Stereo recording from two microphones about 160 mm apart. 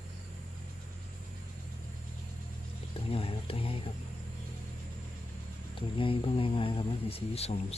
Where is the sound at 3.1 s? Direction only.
35° left (ahead or behind).